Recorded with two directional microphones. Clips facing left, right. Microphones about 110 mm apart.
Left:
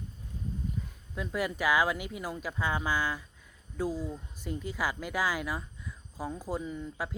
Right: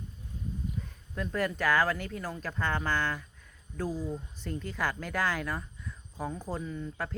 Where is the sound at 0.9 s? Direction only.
5° left (ahead or behind).